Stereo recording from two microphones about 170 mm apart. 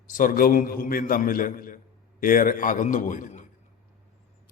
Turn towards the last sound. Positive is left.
turn(degrees=45)  # may be behind; listen again after turning